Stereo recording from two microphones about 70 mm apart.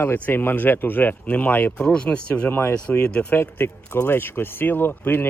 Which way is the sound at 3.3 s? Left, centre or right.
Left.